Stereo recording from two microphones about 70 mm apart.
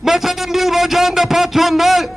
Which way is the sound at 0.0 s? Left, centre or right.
Centre.